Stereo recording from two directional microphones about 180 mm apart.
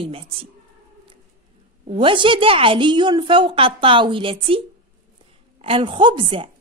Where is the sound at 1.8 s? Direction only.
30° right (ahead or behind).